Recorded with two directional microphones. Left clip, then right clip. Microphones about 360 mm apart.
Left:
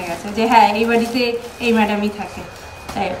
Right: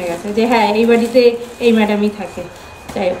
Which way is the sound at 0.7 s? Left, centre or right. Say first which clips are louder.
Right 6 dB; centre.